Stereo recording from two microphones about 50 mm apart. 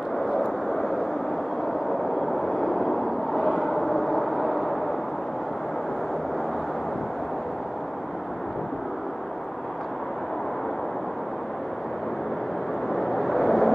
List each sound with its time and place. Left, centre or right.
0.3 s vehicle: centre
2.5 s a sound: centre
12.9 s vehicle: centre